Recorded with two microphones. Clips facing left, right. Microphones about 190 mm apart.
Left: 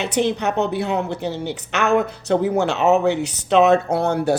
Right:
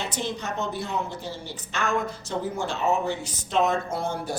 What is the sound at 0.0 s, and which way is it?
A man's voice, 65° left (ahead or behind).